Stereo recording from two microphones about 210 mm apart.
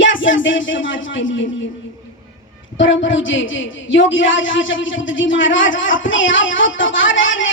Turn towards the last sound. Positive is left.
turn(degrees=65)  # may be behind; listen again after turning